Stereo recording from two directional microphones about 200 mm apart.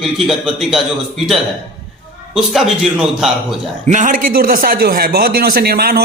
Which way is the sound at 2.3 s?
Centre (ahead or behind).